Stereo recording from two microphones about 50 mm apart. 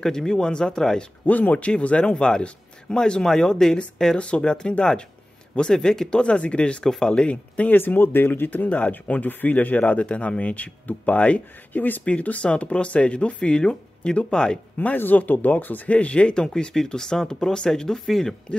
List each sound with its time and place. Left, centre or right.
0.0 s speech: centre
1.2 s speech: left
6.8 s speech: centre
7.7 s speech: left
8.6 s speech: left
15.0 s speech: left; by 18.3 s centre